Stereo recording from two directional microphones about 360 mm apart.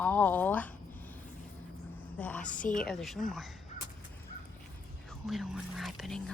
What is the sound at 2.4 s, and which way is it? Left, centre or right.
Speech, left.